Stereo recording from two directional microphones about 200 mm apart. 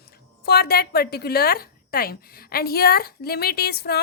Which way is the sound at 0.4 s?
50° left (ahead or behind).